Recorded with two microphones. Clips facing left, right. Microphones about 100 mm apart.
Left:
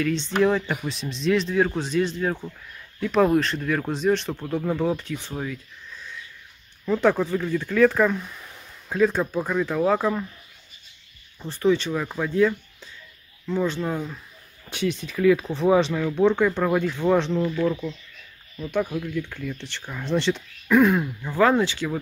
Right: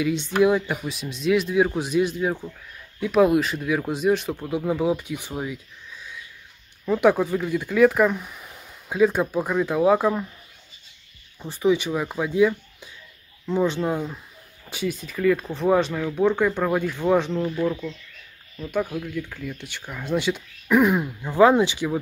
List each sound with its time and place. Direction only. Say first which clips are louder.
0.0 s speech: right 1 dB; 10° right (ahead or behind)
11.3 s speech: even; 10° right (ahead or behind)